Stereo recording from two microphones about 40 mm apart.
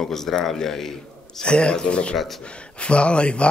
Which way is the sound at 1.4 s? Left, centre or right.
Left.